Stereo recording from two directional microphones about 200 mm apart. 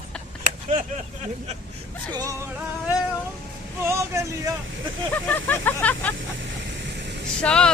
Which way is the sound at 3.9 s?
15° right (ahead or behind).